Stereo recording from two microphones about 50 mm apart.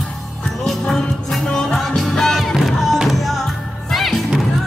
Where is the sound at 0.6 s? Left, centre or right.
Centre.